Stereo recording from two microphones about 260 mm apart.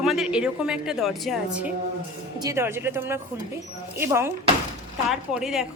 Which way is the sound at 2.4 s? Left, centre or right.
Centre.